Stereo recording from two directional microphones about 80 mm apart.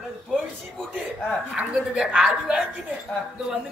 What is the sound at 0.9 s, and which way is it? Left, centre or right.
Speech, centre.